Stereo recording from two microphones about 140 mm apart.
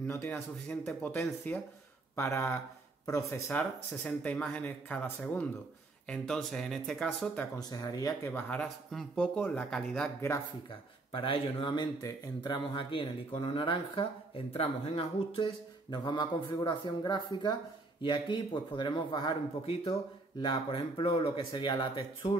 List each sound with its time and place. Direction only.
0.0 s speech: 15° left (ahead or behind)
7.5 s speech: 25° left (ahead or behind)
8.3 s speech: 10° left (ahead or behind)
10.7 s speech: 40° left (ahead or behind)